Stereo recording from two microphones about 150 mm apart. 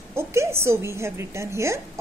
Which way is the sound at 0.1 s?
20° right (ahead or behind).